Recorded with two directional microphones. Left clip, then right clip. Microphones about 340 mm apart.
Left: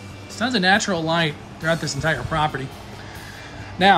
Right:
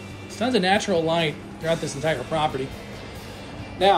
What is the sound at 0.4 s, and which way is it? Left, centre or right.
Speech, centre.